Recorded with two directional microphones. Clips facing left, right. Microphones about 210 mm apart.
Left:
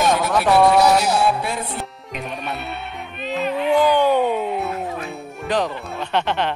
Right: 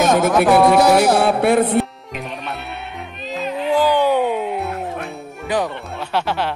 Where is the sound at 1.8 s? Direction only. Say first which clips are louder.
Right 9 dB; centre (ahead or behind).